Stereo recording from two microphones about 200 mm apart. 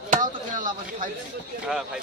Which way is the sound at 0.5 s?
40° right (ahead or behind).